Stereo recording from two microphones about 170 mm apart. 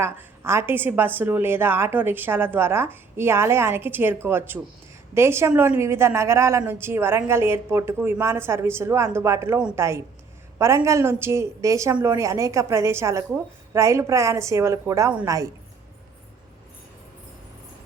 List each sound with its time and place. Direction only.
0.0 s a woman's voice: 15° right (ahead or behind)